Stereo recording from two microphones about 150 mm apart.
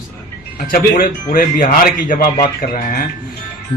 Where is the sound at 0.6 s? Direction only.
70° left (ahead or behind).